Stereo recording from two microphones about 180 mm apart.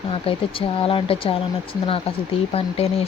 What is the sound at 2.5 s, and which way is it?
Speech, 35° left (ahead or behind).